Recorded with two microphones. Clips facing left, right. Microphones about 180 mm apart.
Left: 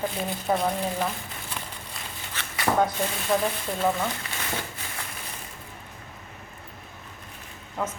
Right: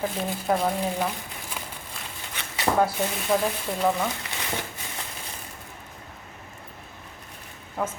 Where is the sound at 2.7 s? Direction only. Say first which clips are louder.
Right 1 dB; 5° right (ahead or behind).